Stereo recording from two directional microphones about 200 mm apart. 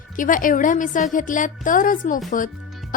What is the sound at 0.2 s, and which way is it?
A woman's voice, 40° left (ahead or behind).